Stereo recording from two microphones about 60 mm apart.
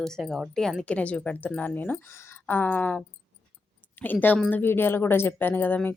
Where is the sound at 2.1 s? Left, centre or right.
Left.